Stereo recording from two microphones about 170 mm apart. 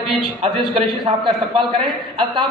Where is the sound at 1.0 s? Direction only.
30° right (ahead or behind).